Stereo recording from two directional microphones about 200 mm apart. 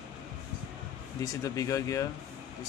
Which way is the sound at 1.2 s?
15° left (ahead or behind).